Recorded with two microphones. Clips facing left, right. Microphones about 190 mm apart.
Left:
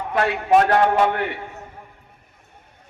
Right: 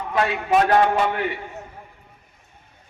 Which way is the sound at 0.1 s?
60° left (ahead or behind).